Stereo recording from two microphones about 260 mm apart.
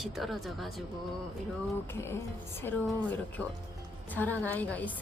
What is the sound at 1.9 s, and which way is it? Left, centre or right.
A woman's voice, centre.